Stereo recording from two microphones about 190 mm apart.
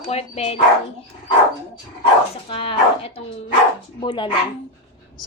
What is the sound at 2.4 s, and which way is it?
Speech, 30° left (ahead or behind).